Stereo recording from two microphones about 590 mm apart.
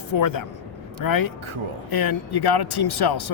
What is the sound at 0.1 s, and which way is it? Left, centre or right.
A man's voice, left.